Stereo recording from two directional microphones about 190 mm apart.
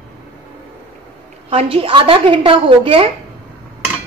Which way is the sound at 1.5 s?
30° right (ahead or behind).